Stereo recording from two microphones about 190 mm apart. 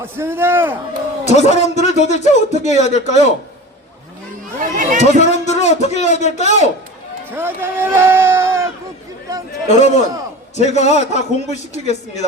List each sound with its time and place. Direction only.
0.0 s speech: 10° right (ahead or behind)
1.2 s a man's voice: 35° left (ahead or behind)
4.8 s speech: 40° right (ahead or behind)
5.2 s speech: 35° left (ahead or behind)
7.3 s speech: 10° right (ahead or behind)
9.6 s a man's voice: 35° left (ahead or behind)